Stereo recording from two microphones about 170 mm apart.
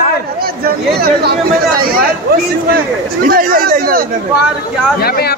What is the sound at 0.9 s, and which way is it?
Speech, 70° right (ahead or behind).